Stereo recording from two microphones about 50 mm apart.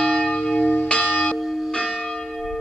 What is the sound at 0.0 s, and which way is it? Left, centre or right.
Church bell, centre.